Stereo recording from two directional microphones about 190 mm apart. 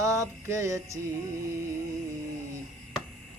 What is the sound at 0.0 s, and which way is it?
Music, 15° right (ahead or behind).